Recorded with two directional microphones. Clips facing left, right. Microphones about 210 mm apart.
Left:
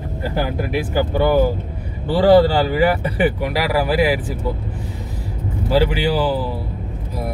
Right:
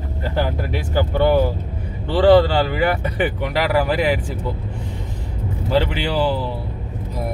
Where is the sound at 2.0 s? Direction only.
45° left (ahead or behind).